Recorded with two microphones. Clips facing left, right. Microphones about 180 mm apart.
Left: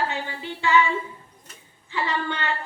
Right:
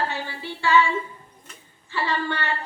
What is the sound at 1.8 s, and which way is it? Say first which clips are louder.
Speech: right 1 dB; 20° left (ahead or behind).